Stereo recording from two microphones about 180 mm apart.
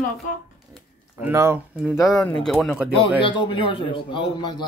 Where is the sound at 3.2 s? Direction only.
25° left (ahead or behind).